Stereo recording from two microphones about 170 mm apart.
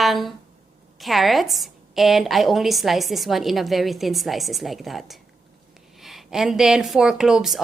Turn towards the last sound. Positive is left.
turn(degrees=0)  # may be behind; listen again after turning